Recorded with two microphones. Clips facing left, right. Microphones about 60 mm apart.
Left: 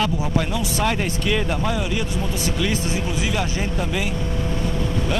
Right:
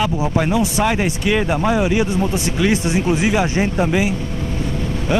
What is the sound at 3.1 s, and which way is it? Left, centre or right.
Speech, right.